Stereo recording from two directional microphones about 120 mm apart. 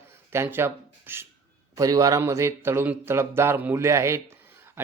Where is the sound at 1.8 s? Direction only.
30° right (ahead or behind).